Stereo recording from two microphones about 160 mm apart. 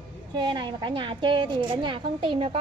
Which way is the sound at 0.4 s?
30° right (ahead or behind).